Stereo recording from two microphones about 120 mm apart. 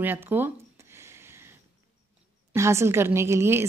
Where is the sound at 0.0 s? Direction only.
15° right (ahead or behind).